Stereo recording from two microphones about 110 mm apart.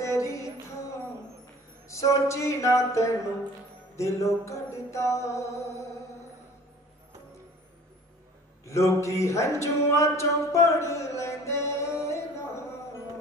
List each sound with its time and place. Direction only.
0.0 s music: 30° left (ahead or behind)
1.9 s music: 30° left (ahead or behind)
8.6 s speech: 25° left (ahead or behind)